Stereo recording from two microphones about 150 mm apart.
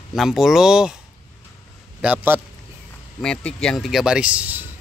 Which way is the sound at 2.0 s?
10° right (ahead or behind).